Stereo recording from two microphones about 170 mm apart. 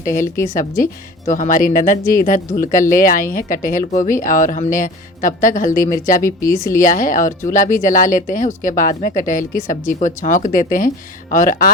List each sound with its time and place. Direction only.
0.0 s speech: 50° left (ahead or behind)
6.4 s speech: 15° left (ahead or behind)
6.7 s speech: 50° left (ahead or behind)